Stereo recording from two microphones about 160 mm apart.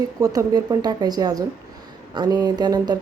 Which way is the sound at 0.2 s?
25° right (ahead or behind).